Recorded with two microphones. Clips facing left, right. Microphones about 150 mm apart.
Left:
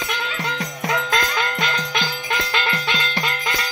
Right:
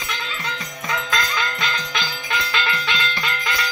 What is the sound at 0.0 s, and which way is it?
Music, 60° left (ahead or behind).